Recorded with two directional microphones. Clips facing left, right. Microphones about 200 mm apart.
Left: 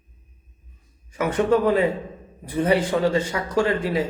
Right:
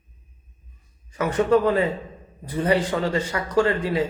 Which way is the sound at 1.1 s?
15° left (ahead or behind).